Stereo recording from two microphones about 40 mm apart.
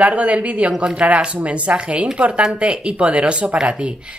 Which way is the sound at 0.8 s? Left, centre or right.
Right.